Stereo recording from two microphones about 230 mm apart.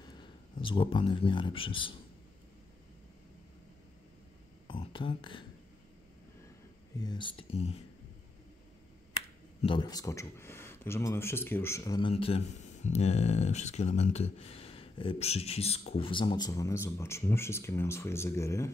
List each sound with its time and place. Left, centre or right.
0.0 s speech: left
4.6 s speech: left
7.0 s speech: centre
9.6 s speech: left